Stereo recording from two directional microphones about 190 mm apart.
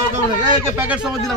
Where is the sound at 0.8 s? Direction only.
5° right (ahead or behind).